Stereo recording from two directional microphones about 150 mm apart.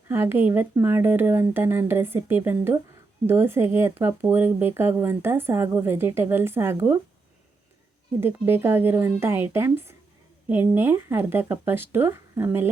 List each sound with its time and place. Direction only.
0.1 s speech: 15° right (ahead or behind)
8.2 s speech: 15° right (ahead or behind)